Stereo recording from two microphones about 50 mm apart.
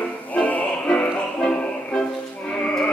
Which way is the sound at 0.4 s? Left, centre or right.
Left.